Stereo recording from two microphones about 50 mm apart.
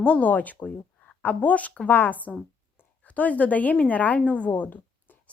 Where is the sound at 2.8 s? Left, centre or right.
Left.